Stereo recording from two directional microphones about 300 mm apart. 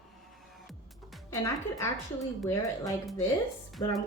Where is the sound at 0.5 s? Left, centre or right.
Centre.